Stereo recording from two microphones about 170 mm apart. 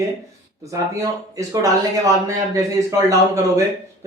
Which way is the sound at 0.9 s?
20° right (ahead or behind).